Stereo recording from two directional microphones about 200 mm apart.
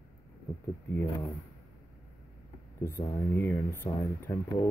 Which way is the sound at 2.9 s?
10° left (ahead or behind).